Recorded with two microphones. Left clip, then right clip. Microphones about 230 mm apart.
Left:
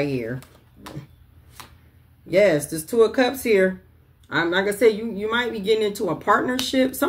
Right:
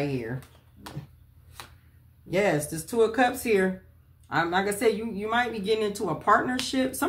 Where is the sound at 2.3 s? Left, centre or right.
Centre.